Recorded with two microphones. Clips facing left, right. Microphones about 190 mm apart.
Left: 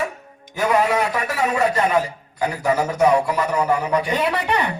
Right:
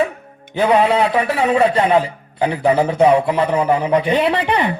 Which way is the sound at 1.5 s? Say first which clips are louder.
Right 5 dB; 25° right (ahead or behind).